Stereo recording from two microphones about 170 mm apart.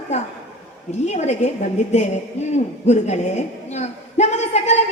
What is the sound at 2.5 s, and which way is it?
A woman's voice, 40° left (ahead or behind).